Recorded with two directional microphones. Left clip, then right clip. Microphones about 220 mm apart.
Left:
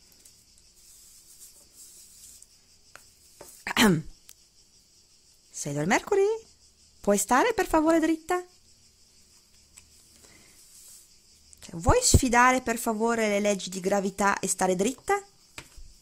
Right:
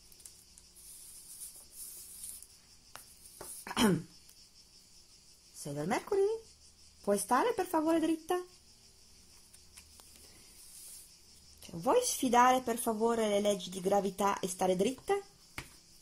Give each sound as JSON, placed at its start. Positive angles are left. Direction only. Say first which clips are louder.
{"t": 3.6, "sound": "a sound", "louder": "left 8 dB", "side_deg": 35}
{"t": 5.6, "sound": "speech", "louder": "left 9 dB", "side_deg": 40}
{"t": 11.6, "sound": "speech", "louder": "left 6 dB", "side_deg": 35}